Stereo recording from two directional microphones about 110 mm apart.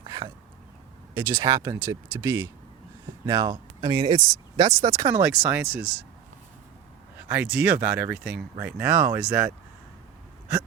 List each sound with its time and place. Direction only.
0.0 s a sound: 40° right (ahead or behind)
1.1 s speech: 25° right (ahead or behind)
3.2 s speech: 40° right (ahead or behind)
4.1 s speech: 35° right (ahead or behind)
5.2 s speech: 20° right (ahead or behind)
7.2 s speech: 15° right (ahead or behind)